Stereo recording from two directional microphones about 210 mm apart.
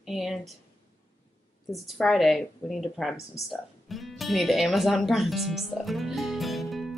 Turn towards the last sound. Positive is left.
turn(degrees=0)  # may be behind; listen again after turning